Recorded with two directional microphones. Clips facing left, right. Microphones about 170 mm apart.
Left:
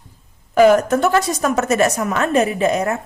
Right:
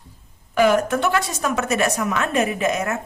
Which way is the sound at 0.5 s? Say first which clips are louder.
Left 5 dB; 40° left (ahead or behind).